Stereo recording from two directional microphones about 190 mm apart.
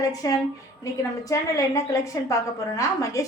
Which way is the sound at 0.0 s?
20° left (ahead or behind).